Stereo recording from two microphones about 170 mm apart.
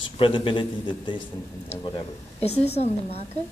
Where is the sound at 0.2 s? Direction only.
30° left (ahead or behind).